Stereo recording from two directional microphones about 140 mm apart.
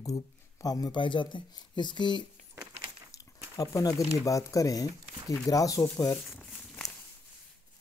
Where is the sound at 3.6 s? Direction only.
25° left (ahead or behind).